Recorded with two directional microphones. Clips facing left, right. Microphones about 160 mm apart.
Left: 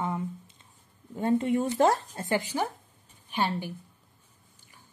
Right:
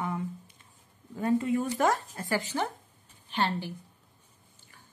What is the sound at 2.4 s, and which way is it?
A woman's voice, 10° left (ahead or behind).